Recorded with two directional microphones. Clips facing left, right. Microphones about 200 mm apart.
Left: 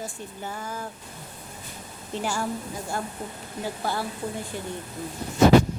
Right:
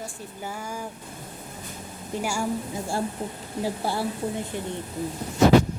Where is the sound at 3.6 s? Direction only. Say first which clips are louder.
Right 2 dB; 30° right (ahead or behind).